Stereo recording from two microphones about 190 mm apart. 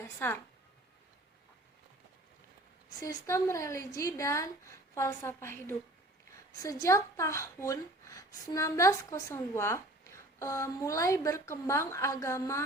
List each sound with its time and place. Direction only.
0.0 s a woman's voice: 10° left (ahead or behind)
3.0 s speech: 15° left (ahead or behind)